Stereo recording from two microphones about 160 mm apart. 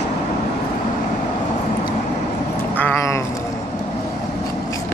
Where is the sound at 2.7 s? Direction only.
10° left (ahead or behind).